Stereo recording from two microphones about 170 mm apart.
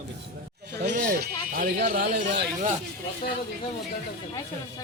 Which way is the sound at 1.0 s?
55° right (ahead or behind).